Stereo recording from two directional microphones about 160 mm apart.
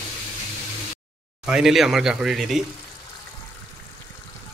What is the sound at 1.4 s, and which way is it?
Speech, 5° right (ahead or behind).